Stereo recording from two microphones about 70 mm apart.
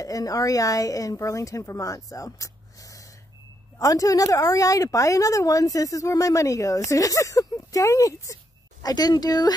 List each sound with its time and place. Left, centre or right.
0.0 s a woman's voice: left
8.8 s speech: left